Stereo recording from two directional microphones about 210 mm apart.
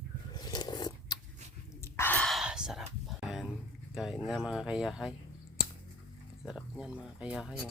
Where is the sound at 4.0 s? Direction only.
Centre (ahead or behind).